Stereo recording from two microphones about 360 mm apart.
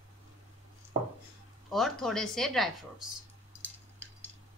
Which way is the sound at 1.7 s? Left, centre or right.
Centre.